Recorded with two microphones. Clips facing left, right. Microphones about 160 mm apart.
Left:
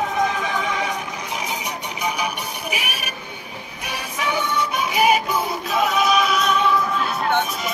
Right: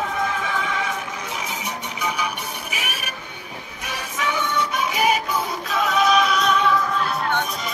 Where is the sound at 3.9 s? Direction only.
10° left (ahead or behind).